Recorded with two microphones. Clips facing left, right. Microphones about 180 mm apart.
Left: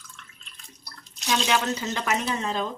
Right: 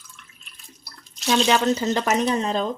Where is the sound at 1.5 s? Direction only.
35° right (ahead or behind).